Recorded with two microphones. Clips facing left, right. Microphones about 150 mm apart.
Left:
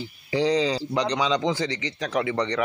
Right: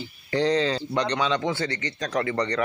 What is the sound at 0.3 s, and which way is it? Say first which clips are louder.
Speech: even; 10° left (ahead or behind).